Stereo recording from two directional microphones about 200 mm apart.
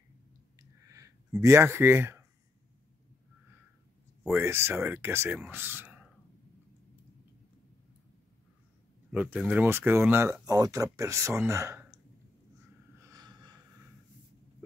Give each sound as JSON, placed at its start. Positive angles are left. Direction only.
{"t": 0.6, "sound": "a sound", "side_deg": -15}
{"t": 4.3, "sound": "speech", "side_deg": -10}
{"t": 9.1, "sound": "speech", "side_deg": -10}
{"t": 13.0, "sound": "snort", "side_deg": -20}